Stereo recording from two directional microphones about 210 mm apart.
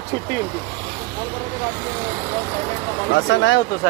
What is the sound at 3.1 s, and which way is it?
Speech, 60° left (ahead or behind).